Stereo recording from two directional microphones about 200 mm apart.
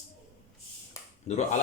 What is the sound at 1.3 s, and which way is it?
Speech, 35° left (ahead or behind).